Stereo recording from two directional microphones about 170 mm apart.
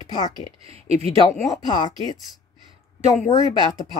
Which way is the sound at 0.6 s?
35° right (ahead or behind).